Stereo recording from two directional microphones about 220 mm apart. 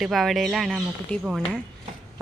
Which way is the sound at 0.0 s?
Centre (ahead or behind).